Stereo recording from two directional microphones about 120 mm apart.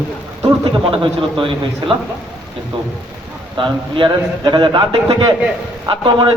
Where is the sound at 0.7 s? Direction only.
45° right (ahead or behind).